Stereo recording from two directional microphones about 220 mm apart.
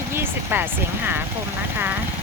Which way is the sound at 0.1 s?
10° right (ahead or behind).